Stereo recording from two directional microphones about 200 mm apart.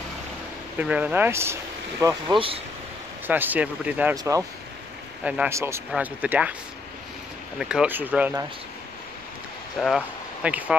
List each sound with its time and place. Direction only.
0.7 s speech: 5° right (ahead or behind)
2.3 s speech: 25° right (ahead or behind)
3.3 s speech: 10° right (ahead or behind)
5.2 s speech: 5° right (ahead or behind)
7.5 s speech: 5° right (ahead or behind)
9.8 s speech: 5° right (ahead or behind)